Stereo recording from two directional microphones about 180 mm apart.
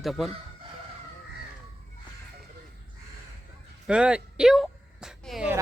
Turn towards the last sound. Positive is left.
turn(degrees=0)  # may be behind; listen again after turning